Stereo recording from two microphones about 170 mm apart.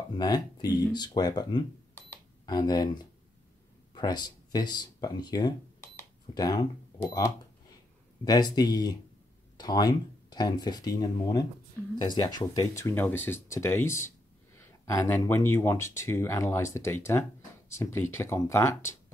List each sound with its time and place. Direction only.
0.2 s speech: 25° left (ahead or behind)
2.0 s a sound: 20° left (ahead or behind)
3.9 s speech: 25° left (ahead or behind)